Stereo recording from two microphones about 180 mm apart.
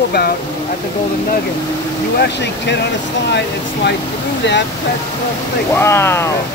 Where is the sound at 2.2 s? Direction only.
70° left (ahead or behind).